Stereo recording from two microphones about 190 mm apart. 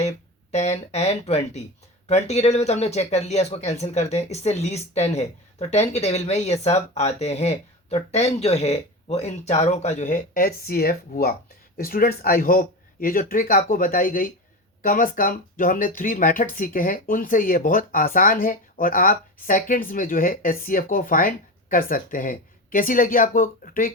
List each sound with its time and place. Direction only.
0.5 s speech: 35° left (ahead or behind)